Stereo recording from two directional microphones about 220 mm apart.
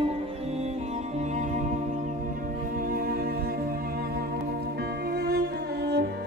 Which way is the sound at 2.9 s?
40° right (ahead or behind).